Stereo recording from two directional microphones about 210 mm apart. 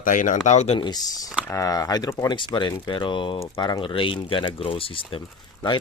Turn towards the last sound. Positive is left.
turn(degrees=25)  # may be behind; listen again after turning